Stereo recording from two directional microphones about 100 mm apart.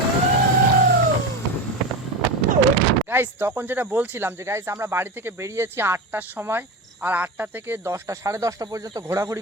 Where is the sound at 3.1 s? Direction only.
20° right (ahead or behind).